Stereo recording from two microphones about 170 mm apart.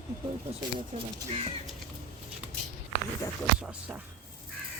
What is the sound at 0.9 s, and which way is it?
Speech, 45° right (ahead or behind).